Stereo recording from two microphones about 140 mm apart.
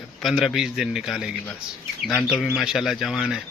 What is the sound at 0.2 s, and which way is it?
Speech, centre (ahead or behind).